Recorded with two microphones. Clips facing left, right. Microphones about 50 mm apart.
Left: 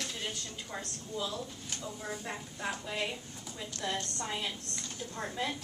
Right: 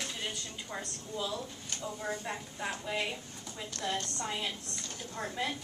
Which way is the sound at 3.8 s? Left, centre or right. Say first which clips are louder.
Right 1 dB; centre.